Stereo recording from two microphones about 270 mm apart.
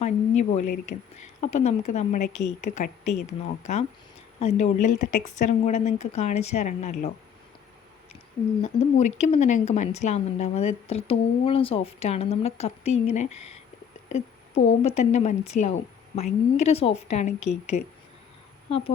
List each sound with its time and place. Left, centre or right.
0.0 s a sound: left
1.5 s a woman's voice: left
8.6 s a woman's voice: left